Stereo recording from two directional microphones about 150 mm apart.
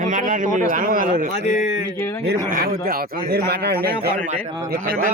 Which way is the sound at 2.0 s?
20° left (ahead or behind).